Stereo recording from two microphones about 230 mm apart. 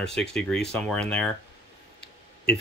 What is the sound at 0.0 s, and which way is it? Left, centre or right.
Speech, centre.